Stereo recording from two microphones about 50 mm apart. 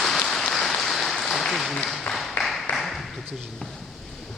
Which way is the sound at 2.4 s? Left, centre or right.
Centre.